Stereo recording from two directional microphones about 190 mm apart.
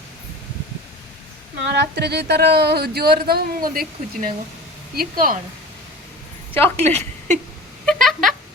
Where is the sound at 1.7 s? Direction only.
60° right (ahead or behind).